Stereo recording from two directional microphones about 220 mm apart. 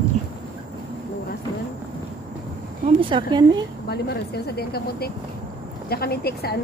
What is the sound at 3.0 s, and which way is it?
Speech, 20° right (ahead or behind).